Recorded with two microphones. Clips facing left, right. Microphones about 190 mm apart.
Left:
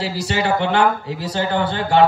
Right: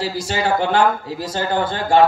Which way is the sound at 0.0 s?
70° left (ahead or behind).